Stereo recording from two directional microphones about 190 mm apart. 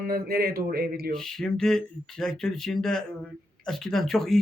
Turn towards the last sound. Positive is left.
turn(degrees=0)  # may be behind; listen again after turning